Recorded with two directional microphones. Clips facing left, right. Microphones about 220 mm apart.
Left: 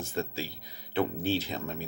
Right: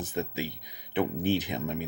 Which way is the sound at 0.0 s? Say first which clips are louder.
Right 2 dB; 20° right (ahead or behind).